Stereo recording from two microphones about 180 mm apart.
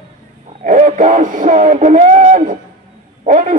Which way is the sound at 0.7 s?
45° right (ahead or behind).